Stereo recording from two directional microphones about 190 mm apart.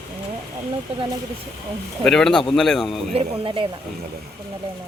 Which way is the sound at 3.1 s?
30° right (ahead or behind).